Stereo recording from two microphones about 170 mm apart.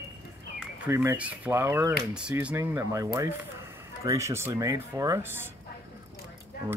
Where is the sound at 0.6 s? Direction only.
15° right (ahead or behind).